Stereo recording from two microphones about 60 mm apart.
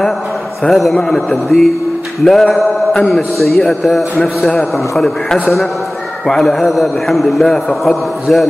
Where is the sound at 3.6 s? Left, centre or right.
Centre.